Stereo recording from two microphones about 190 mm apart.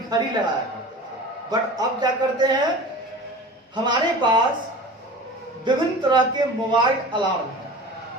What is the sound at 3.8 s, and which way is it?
Speech, 25° right (ahead or behind).